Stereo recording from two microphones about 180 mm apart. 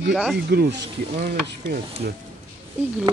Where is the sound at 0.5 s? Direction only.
60° right (ahead or behind).